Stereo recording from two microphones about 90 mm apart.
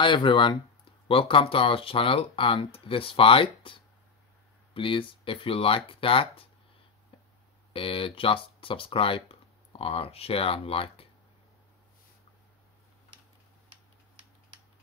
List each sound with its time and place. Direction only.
0.0 s speech: 65° left (ahead or behind)
1.0 s speech: 80° left
7.7 s speech: 85° left